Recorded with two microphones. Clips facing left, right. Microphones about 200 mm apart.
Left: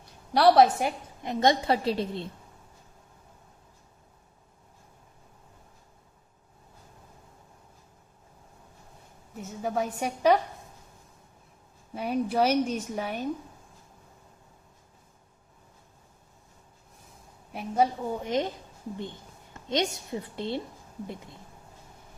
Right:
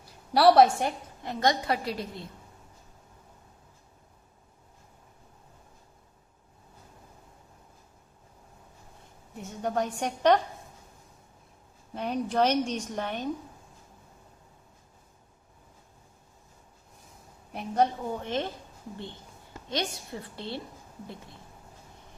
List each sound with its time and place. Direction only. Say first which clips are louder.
0.3 s a woman's voice: even; centre (ahead or behind)
1.2 s a woman's voice: left 3 dB; 20° left (ahead or behind)
9.3 s a woman's voice: even; centre (ahead or behind)
11.9 s a woman's voice: left 1 dB; 5° left (ahead or behind)
17.5 s a woman's voice: even; 5° left (ahead or behind)
19.6 s a woman's voice: left 4 dB; 20° left (ahead or behind)